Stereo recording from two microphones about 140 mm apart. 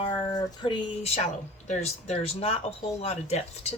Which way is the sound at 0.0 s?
30° left (ahead or behind).